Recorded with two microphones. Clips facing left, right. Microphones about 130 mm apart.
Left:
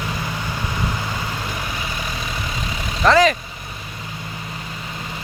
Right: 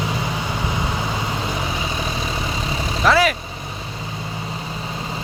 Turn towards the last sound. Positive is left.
turn(degrees=-5)  # may be behind; listen again after turning